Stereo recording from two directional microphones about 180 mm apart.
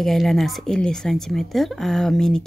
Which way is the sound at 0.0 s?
Centre (ahead or behind).